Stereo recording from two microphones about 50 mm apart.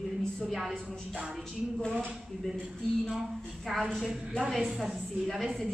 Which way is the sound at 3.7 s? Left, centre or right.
Centre.